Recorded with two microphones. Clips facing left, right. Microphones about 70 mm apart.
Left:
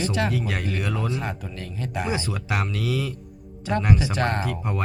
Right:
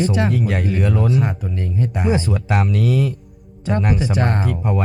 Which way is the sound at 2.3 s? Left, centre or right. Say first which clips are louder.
Right 7 dB; centre.